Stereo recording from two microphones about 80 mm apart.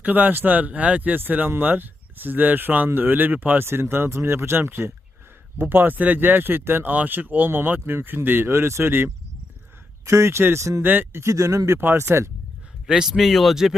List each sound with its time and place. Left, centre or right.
0.0 s speech: right
10.8 s speech: right
12.9 s speech: centre